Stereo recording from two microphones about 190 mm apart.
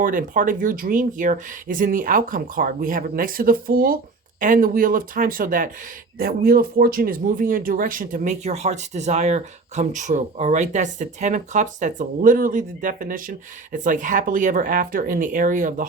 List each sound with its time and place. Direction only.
0.0 s speech: 45° right (ahead or behind)